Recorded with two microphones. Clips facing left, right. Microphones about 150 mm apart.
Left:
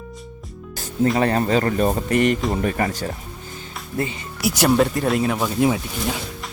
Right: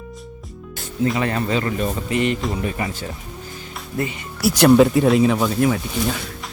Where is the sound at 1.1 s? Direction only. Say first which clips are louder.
Left 3 dB; 40° left (ahead or behind).